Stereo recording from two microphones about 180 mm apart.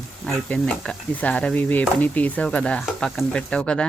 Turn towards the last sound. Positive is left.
turn(degrees=5)  # may be behind; listen again after turning